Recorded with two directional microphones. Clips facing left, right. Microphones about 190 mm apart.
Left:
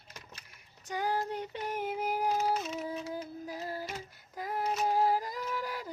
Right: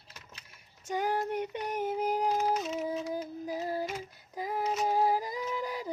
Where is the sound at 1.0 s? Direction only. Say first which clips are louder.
Right 2 dB; 20° right (ahead or behind).